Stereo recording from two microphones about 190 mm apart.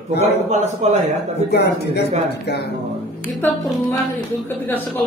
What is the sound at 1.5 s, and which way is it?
Speech, 60° left (ahead or behind).